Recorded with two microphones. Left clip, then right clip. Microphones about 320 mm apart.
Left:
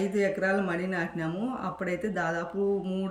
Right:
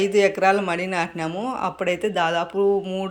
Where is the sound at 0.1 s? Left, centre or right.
Centre.